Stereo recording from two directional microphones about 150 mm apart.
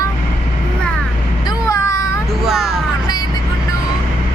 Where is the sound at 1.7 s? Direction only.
20° left (ahead or behind).